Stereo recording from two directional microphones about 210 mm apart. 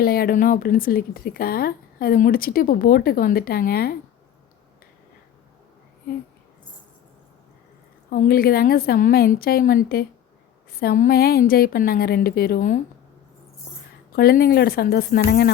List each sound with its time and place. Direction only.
0.0 s a woman's voice: 45° left (ahead or behind)
8.1 s a woman's voice: 45° left (ahead or behind)
14.2 s a woman's voice: 45° left (ahead or behind)